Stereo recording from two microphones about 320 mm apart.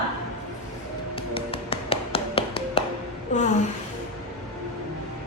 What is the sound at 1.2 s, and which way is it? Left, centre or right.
Tap, centre.